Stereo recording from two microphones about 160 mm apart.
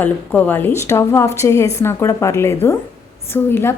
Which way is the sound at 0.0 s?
10° left (ahead or behind).